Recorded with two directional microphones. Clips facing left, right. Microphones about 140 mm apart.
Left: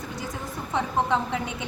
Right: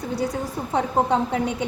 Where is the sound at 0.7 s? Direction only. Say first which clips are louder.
Right 4 dB; 40° right (ahead or behind).